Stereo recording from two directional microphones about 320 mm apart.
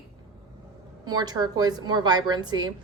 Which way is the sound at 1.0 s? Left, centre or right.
Centre.